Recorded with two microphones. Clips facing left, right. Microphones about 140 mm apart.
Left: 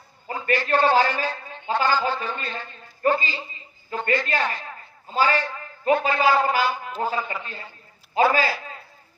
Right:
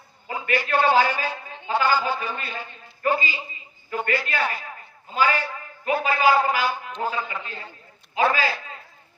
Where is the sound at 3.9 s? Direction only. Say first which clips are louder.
Right 1 dB; 30° left (ahead or behind).